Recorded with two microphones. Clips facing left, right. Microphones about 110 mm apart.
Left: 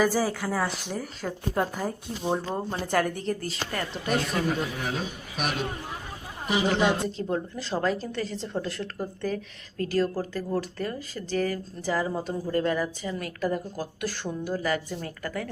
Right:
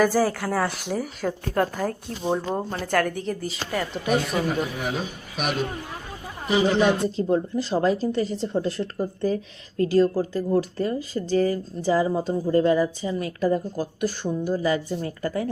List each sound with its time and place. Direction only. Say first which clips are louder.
0.0 s speech: right 4 dB; centre (ahead or behind)
7.2 s speech: right 7 dB; 20° right (ahead or behind)